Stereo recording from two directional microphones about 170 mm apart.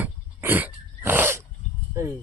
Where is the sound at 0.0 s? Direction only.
10° right (ahead or behind).